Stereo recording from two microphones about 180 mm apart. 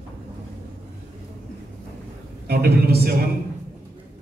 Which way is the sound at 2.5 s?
60° right (ahead or behind).